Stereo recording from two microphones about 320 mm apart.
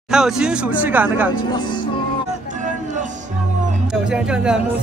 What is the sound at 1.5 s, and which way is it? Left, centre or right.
Music, centre.